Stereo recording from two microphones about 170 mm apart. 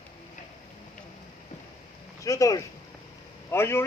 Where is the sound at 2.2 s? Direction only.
20° left (ahead or behind).